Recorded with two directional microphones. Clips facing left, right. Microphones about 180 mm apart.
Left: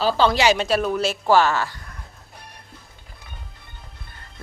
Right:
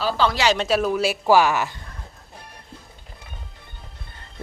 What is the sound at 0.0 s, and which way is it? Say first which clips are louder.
Speech: left 3 dB; 30° left (ahead or behind).